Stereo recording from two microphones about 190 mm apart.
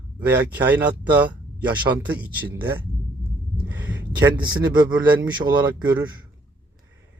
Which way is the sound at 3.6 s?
10° right (ahead or behind).